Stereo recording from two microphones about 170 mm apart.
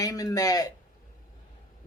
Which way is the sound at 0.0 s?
20° left (ahead or behind).